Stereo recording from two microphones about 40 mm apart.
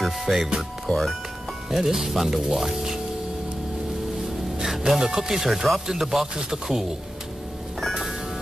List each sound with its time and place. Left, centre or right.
0.0 s music: centre
0.8 s speech: centre
1.7 s speech: centre
4.6 s speech: centre